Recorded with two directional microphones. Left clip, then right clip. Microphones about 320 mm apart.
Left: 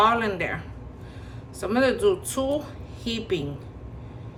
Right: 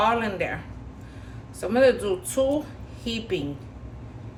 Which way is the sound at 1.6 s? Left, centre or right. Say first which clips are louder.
Right 1 dB; centre.